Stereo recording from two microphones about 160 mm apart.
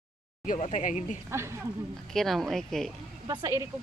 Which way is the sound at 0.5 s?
45° left (ahead or behind).